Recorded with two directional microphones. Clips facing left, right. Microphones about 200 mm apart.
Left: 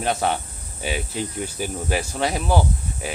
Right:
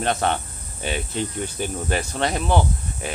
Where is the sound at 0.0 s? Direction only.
5° left (ahead or behind).